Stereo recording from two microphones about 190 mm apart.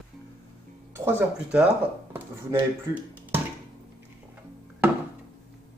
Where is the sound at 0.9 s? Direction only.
10° right (ahead or behind).